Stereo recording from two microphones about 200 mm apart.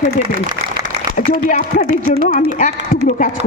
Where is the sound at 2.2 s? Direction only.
45° right (ahead or behind).